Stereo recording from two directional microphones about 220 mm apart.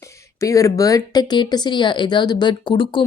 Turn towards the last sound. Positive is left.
turn(degrees=20)  # may be behind; listen again after turning